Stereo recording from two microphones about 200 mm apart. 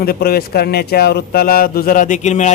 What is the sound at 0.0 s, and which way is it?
Speech, 50° left (ahead or behind).